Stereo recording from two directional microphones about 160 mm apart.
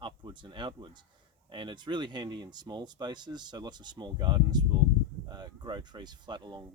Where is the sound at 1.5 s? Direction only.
30° right (ahead or behind).